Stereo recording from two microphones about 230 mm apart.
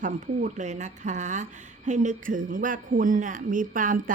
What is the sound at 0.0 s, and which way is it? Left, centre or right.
A woman's voice, right.